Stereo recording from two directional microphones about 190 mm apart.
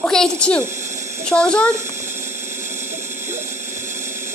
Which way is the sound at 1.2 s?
5° left (ahead or behind).